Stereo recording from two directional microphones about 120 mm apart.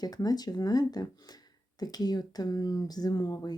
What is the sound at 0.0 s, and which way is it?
Speech, 35° left (ahead or behind).